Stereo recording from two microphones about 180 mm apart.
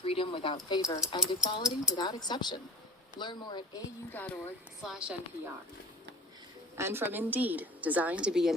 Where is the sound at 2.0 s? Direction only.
25° left (ahead or behind).